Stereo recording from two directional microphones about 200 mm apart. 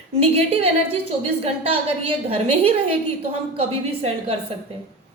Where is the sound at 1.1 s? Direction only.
30° right (ahead or behind).